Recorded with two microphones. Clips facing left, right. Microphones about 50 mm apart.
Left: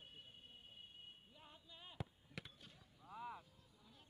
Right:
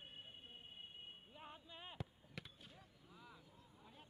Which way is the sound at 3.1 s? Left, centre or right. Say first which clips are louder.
Left 12 dB; left.